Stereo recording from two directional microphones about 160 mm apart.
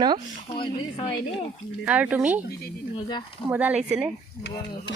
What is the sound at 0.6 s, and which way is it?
Speech, 30° left (ahead or behind).